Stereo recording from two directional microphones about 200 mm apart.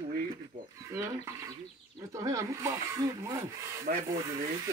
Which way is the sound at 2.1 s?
15° right (ahead or behind).